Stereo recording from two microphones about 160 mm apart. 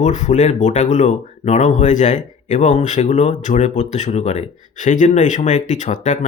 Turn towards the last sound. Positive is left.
turn(degrees=50)  # may be behind; listen again after turning